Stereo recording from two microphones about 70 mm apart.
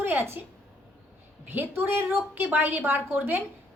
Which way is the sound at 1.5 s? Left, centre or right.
Right.